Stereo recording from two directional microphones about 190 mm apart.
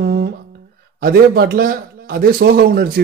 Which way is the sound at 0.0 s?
55° right (ahead or behind).